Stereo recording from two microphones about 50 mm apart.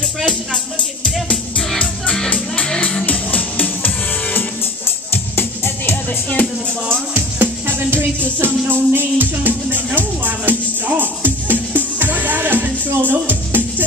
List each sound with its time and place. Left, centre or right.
1.1 s music: centre
2.2 s music: left
7.2 s music: right